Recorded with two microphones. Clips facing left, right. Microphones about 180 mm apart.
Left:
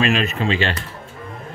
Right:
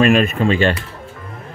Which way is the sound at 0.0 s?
50° right (ahead or behind).